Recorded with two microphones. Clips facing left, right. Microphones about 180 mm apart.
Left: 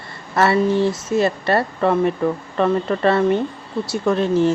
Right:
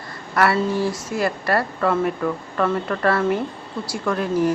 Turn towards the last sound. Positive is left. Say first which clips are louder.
# left 4 dB
turn(degrees=25)  # may be behind; listen again after turning